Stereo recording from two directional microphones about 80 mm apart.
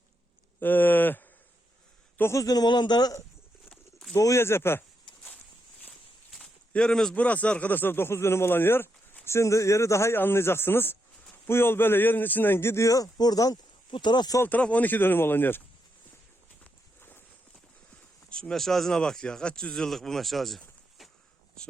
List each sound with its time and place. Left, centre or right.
0.6 s a man's voice: left
2.4 s a man's voice: left
4.1 s speech: left
4.4 s a man's voice: left
6.3 s a man's voice: centre; by 13.6 s left
13.9 s a man's voice: left
14.4 s speech: centre
17.0 s clip-clop: left
18.3 s speech: centre